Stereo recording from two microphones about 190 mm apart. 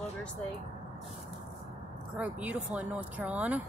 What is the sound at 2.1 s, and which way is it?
Speech, 5° right (ahead or behind).